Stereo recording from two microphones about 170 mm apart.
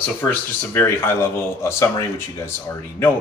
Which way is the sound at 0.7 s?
15° left (ahead or behind).